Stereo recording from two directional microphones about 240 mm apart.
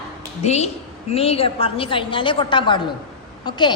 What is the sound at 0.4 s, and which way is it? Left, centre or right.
A woman's voice, left.